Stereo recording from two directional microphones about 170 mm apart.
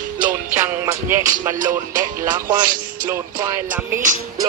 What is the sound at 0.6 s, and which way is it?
Music, 15° right (ahead or behind).